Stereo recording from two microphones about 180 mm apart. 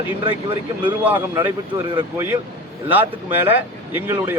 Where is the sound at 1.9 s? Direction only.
25° right (ahead or behind).